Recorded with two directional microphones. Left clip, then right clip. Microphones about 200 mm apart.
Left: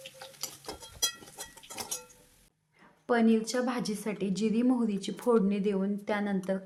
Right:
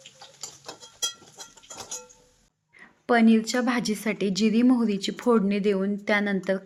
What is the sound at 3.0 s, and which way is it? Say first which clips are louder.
A woman's voice: right 6 dB; 15° right (ahead or behind).